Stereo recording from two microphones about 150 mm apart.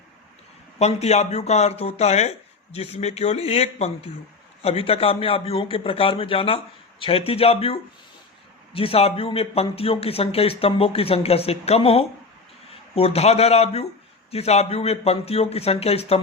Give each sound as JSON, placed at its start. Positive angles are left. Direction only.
{"t": 0.8, "sound": "speech", "side_deg": 45}